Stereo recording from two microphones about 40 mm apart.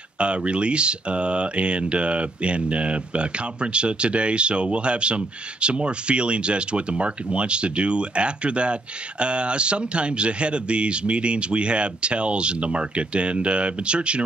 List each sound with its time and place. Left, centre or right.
0.2 s speech: right